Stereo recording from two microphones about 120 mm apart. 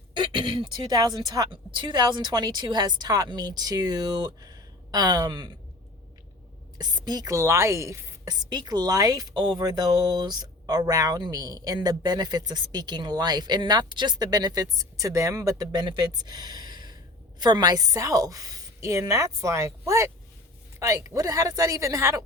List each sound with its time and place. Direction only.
0.2 s speech: 45° right (ahead or behind)
6.7 s a woman's voice: 35° right (ahead or behind)
8.4 s a woman's voice: 35° right (ahead or behind)